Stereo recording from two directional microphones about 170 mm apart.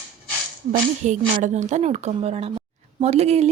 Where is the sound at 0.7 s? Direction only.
50° right (ahead or behind).